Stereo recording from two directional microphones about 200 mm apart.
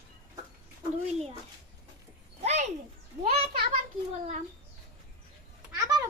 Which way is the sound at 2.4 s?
35° right (ahead or behind).